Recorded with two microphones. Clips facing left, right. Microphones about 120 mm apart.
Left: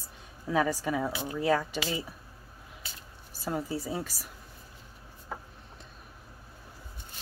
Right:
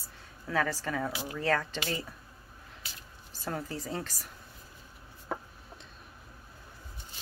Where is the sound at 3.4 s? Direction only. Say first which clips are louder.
Left 4 dB; 10° left (ahead or behind).